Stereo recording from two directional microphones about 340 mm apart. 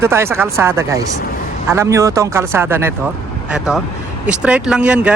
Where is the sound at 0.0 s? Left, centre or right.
Centre.